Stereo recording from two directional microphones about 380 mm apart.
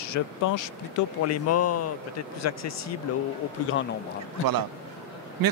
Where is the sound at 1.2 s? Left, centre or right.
Left.